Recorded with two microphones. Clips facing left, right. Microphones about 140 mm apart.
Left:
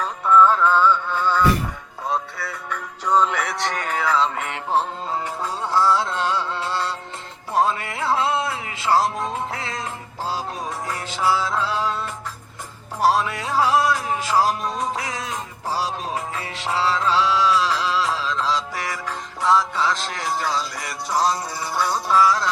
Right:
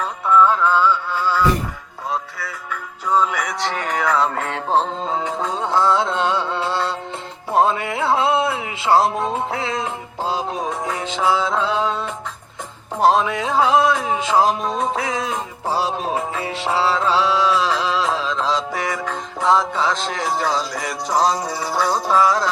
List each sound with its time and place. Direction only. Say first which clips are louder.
0.3 s music: even; 10° right (ahead or behind)
5.3 s music: right 2 dB; 20° right (ahead or behind)
21.8 s music: right 2 dB; 45° right (ahead or behind)
22.2 s music: even; 30° right (ahead or behind)